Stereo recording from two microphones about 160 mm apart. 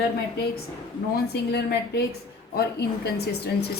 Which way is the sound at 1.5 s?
75° left (ahead or behind).